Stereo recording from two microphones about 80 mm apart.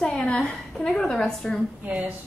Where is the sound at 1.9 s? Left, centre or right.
Centre.